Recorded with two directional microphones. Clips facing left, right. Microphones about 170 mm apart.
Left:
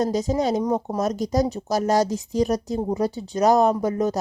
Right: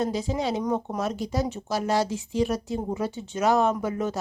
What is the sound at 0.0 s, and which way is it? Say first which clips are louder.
Speech: left 5 dB; 40° left (ahead or behind).